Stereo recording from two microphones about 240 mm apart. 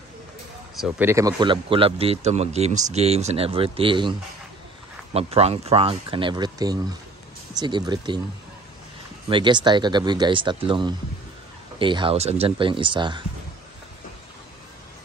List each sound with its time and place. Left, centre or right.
0.7 s speech: centre; by 4.1 s right
5.1 s speech: right
9.3 s speech: centre